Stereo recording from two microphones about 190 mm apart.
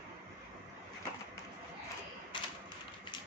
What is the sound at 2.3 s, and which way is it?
Typewriter, 25° left (ahead or behind).